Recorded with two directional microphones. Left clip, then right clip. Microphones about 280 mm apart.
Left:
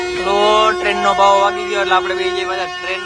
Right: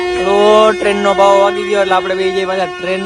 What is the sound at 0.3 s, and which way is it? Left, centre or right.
Speech, centre.